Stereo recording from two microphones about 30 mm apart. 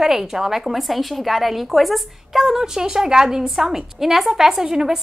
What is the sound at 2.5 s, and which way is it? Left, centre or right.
Speech, centre.